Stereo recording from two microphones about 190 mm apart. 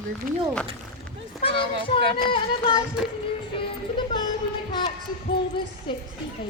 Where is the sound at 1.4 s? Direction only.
30° left (ahead or behind).